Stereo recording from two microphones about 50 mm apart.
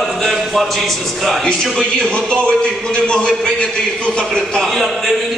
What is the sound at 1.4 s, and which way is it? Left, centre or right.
A man's voice, centre.